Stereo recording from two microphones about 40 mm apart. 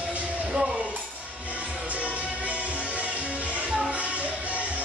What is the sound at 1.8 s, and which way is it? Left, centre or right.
Music, right.